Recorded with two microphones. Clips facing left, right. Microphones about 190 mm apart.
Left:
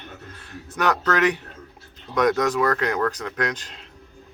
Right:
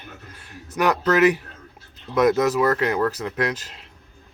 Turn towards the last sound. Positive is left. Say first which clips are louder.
# right 2 dB
turn(degrees=-5)  # may be behind; listen again after turning